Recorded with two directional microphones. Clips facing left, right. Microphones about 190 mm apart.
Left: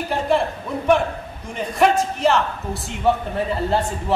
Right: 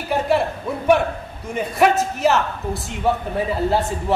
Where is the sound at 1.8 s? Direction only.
5° right (ahead or behind).